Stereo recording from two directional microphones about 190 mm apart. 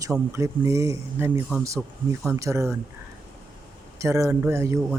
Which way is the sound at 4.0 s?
15° right (ahead or behind).